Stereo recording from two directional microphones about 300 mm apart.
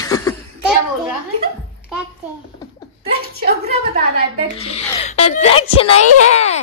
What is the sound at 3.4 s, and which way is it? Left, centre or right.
Speech, right.